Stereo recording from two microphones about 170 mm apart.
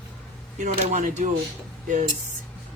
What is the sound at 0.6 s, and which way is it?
Dishes, 50° right (ahead or behind).